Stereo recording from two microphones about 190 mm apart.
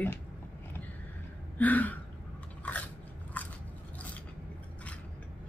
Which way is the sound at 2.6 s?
10° left (ahead or behind).